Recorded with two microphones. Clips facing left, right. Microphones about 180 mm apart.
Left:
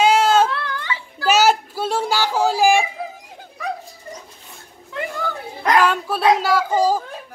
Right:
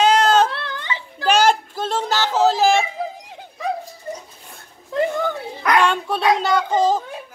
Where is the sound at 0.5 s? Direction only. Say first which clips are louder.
Left 2 dB; 25° right (ahead or behind).